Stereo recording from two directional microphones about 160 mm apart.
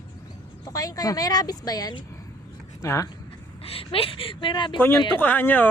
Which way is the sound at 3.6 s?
35° left (ahead or behind).